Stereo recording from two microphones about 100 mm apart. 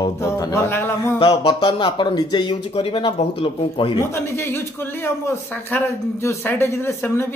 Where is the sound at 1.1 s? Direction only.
55° left (ahead or behind).